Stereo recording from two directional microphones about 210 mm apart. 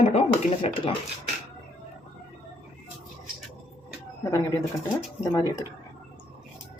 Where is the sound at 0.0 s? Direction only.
30° left (ahead or behind).